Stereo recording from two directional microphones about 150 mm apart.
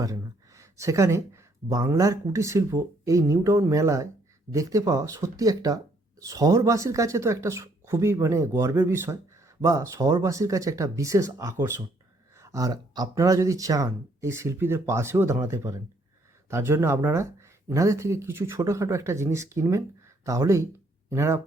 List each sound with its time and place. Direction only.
0.0 s speech: 20° right (ahead or behind)